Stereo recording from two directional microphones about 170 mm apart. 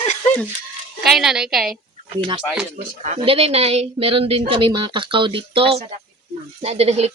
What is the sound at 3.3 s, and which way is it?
A woman's voice, 35° right (ahead or behind).